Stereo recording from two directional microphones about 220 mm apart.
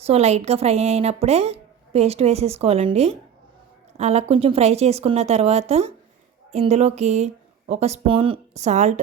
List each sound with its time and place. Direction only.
0.0 s a woman's voice: 30° right (ahead or behind)